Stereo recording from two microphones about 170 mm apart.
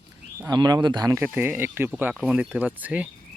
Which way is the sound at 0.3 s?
20° right (ahead or behind).